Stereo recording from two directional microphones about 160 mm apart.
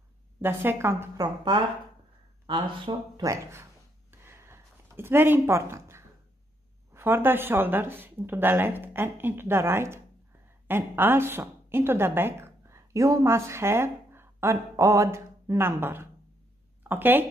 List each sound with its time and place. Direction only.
0.4 s speech: 15° right (ahead or behind)
2.7 s speech: 30° right (ahead or behind)
4.1 s a sound: 15° right (ahead or behind)
6.9 s a woman's voice: 15° right (ahead or behind)